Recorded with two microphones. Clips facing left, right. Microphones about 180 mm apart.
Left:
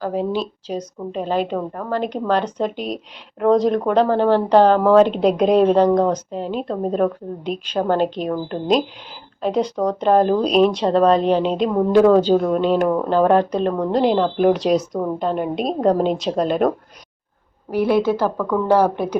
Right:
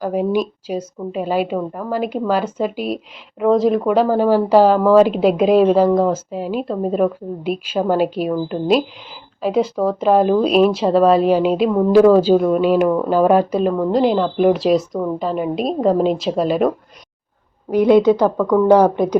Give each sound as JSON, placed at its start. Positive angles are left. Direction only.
{"t": 0.0, "sound": "a woman's voice", "side_deg": -15}
{"t": 17.7, "sound": "a woman's voice", "side_deg": -15}